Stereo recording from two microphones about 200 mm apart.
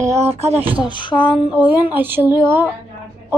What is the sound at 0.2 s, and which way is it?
Speech, 30° right (ahead or behind).